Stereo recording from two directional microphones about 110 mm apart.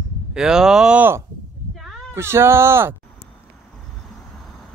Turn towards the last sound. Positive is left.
turn(degrees=-20)  # may be behind; listen again after turning